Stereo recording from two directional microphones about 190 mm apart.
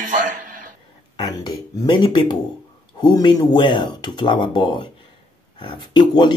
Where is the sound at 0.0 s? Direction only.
45° right (ahead or behind).